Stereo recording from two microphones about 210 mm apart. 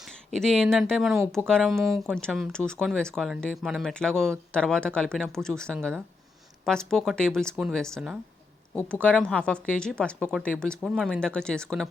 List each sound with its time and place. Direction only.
0.0 s speech: centre (ahead or behind)